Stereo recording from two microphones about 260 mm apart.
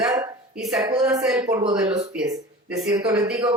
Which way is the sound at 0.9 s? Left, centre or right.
Centre.